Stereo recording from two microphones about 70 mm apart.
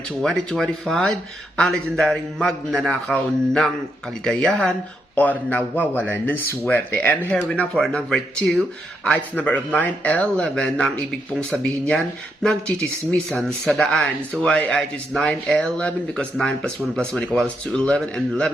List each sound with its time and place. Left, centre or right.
0.2 s a man's voice: centre
5.1 s a man's voice: left
9.1 s speech: left; by 14.1 s centre
14.4 s a man's voice: centre
16.4 s a man's voice: centre